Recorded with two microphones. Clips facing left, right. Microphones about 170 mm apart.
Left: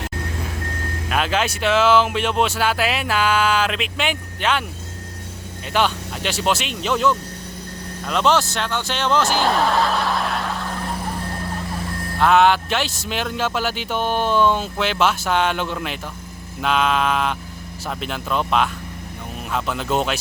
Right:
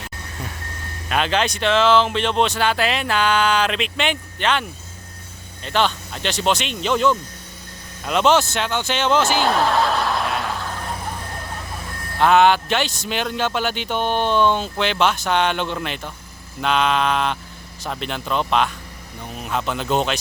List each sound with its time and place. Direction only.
1.1 s speech: 5° left (ahead or behind)
5.6 s speech: 10° left (ahead or behind)
12.2 s speech: centre (ahead or behind)